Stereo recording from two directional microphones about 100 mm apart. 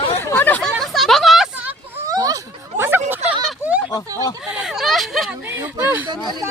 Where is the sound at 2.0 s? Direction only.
35° right (ahead or behind).